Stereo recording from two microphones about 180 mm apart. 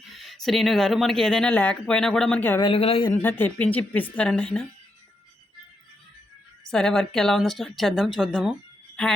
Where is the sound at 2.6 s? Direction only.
30° left (ahead or behind).